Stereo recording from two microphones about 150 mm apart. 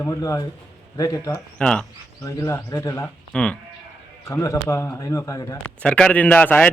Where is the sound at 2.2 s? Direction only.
20° left (ahead or behind).